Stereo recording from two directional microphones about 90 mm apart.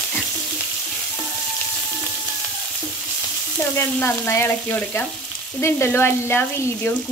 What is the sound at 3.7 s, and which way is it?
Sizzle, 25° left (ahead or behind).